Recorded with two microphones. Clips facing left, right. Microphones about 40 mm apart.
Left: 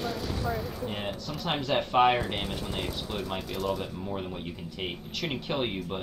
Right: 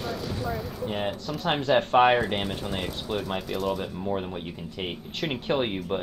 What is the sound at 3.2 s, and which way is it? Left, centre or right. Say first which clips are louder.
Speech: right 3 dB; centre.